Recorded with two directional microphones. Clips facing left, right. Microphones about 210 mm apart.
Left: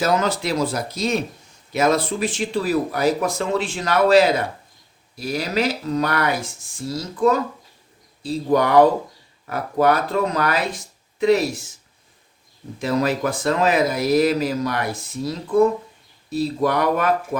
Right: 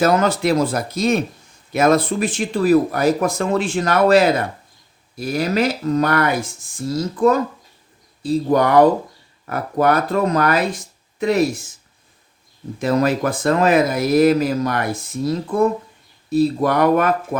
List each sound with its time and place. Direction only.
0.0 s speech: 55° right (ahead or behind)
12.8 s speech: 50° right (ahead or behind)